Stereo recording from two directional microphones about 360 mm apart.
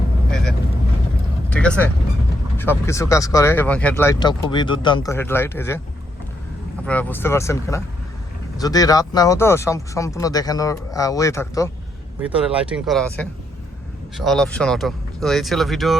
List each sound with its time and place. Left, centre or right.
1.5 s vehicle: centre
2.6 s speech: centre
6.8 s speech: centre
12.3 s speech: centre